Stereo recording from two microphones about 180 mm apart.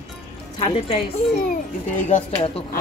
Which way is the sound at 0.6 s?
35° left (ahead or behind).